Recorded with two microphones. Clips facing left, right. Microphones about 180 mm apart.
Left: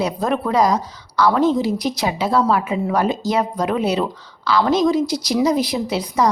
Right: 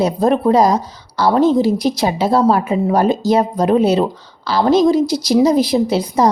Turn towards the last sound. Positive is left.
turn(degrees=-30)  # may be behind; listen again after turning